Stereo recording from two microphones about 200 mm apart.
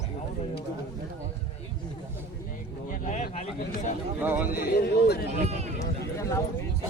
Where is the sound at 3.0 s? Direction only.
35° left (ahead or behind).